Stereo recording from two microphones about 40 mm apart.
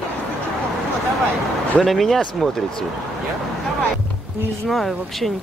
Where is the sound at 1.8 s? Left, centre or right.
Centre.